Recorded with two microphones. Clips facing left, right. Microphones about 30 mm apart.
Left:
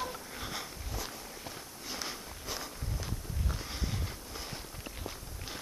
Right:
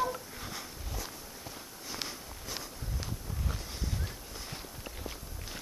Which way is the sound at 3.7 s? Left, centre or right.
Centre.